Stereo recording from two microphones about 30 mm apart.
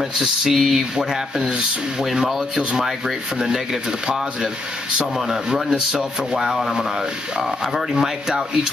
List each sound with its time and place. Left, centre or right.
0.5 s a man's voice: centre
5.3 s a man's voice: centre